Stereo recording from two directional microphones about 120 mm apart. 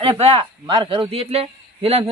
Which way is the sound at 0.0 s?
55° right (ahead or behind).